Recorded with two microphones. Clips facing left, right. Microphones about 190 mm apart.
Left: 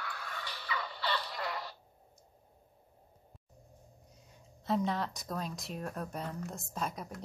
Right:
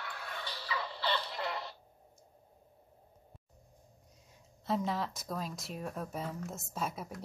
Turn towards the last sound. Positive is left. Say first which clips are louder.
# even
turn(degrees=-5)  # may be behind; listen again after turning